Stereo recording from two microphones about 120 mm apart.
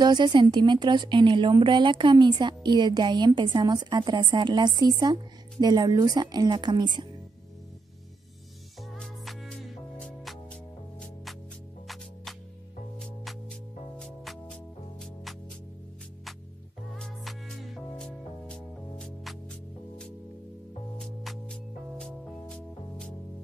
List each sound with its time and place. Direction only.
0.0 s a woman's voice: 40° right (ahead or behind)
8.9 s music: 5° left (ahead or behind)
13.0 s music: centre (ahead or behind)
16.9 s music: centre (ahead or behind)
21.0 s music: centre (ahead or behind)